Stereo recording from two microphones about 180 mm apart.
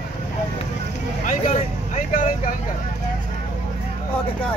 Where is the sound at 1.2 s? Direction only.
45° left (ahead or behind).